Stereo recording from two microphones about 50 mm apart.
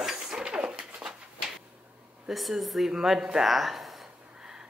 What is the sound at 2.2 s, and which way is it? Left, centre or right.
A woman's voice, centre.